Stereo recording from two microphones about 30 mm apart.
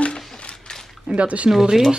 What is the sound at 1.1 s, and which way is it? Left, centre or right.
Speech, right.